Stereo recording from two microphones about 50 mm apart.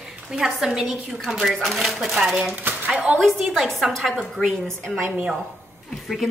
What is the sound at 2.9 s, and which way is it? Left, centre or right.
Speech, centre.